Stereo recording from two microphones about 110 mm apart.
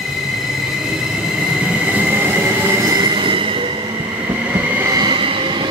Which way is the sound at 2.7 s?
30° right (ahead or behind).